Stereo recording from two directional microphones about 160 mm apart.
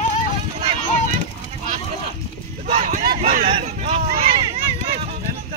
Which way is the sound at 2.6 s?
45° right (ahead or behind).